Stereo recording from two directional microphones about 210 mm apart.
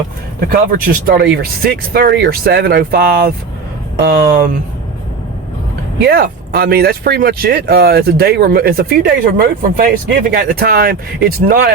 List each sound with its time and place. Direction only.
0.3 s speech: 45° right (ahead or behind)
6.1 s speech: 50° right (ahead or behind)